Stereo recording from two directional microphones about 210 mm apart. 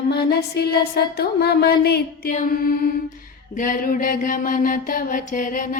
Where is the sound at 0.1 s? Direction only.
50° left (ahead or behind).